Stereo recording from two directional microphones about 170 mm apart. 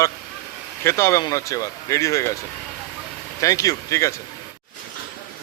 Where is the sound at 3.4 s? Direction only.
20° left (ahead or behind).